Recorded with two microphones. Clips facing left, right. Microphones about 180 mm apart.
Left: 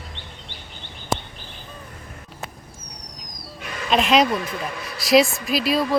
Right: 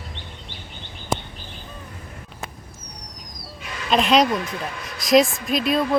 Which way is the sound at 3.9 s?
Centre (ahead or behind).